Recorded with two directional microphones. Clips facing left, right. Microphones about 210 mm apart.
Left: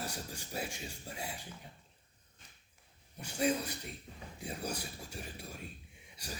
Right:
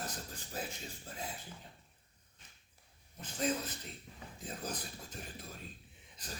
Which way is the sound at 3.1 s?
10° left (ahead or behind).